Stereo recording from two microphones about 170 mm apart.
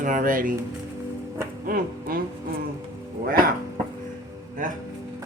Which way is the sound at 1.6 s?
55° right (ahead or behind).